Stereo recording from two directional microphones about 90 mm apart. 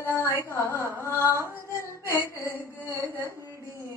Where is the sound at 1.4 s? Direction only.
30° left (ahead or behind).